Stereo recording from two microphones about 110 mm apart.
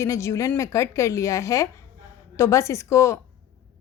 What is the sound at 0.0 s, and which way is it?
A woman's voice, 25° left (ahead or behind).